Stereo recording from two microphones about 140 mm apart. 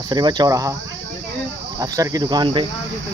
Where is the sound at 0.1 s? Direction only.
30° right (ahead or behind).